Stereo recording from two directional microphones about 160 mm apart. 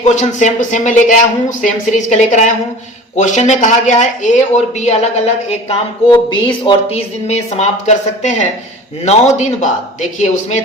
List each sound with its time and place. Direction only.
0.0 s speech: 45° left (ahead or behind)
6.1 s speech: 30° left (ahead or behind)
7.3 s speech: 45° left (ahead or behind)